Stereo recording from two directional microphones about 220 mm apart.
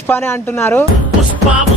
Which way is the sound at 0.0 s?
10° left (ahead or behind).